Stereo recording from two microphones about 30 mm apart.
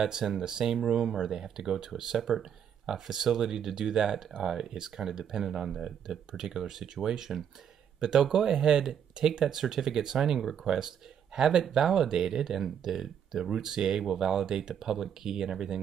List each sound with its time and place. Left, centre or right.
0.0 s speech: centre
10.4 s speech: centre
11.3 s speech: centre